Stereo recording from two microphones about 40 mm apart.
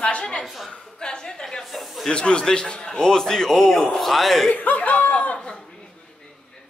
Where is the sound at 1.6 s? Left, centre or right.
Centre.